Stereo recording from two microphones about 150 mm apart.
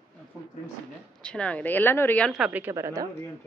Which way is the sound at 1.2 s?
5° left (ahead or behind).